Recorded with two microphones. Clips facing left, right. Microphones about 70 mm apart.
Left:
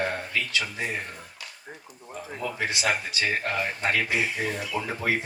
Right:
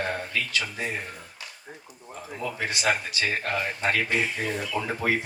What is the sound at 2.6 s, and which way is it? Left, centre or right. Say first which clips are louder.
Speech: right 1 dB; left.